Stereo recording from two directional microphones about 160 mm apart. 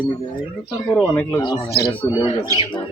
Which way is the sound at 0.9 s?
5° left (ahead or behind).